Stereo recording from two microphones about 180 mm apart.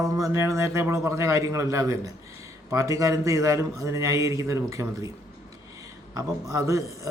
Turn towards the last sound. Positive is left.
turn(degrees=-15)  # may be behind; listen again after turning